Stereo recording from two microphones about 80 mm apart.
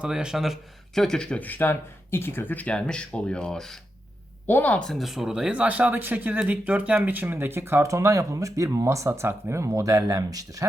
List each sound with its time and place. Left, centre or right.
0.0 s speech: centre
4.4 s speech: left
4.8 s speech: centre; by 10.7 s right